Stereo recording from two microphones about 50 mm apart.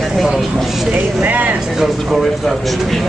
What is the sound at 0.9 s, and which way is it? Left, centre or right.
Speech, right.